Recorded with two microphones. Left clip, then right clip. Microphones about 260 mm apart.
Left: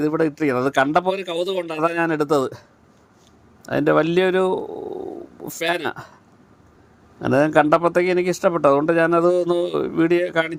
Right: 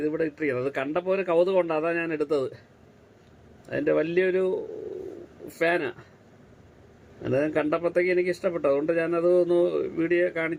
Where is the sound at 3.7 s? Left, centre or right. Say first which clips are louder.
Left 7 dB; left.